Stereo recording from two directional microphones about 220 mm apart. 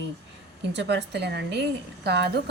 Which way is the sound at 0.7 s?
55° right (ahead or behind).